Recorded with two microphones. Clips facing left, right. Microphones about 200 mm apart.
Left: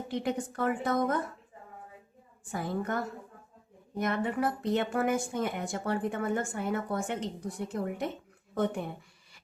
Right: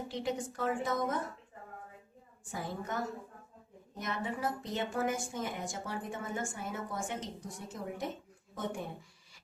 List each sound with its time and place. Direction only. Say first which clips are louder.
0.1 s a woman's voice: left 6 dB; 60° left (ahead or behind)
2.5 s a woman's voice: left 6 dB; 60° left (ahead or behind)
8.5 s a sound: left 7 dB; 60° left (ahead or behind)